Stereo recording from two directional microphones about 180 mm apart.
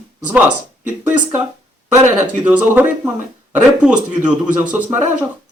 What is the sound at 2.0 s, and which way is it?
Speech, 10° right (ahead or behind).